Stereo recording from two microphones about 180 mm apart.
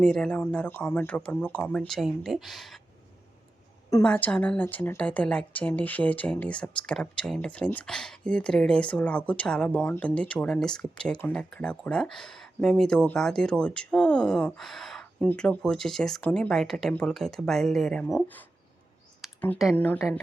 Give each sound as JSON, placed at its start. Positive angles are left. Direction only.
{"t": 0.0, "sound": "a woman's voice", "side_deg": 5}
{"t": 4.0, "sound": "a woman's voice", "side_deg": 5}
{"t": 19.2, "sound": "a sound", "side_deg": 0}
{"t": 19.7, "sound": "speech", "side_deg": 10}